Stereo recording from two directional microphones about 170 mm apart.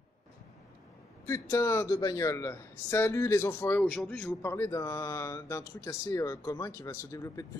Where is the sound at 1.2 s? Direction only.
15° left (ahead or behind).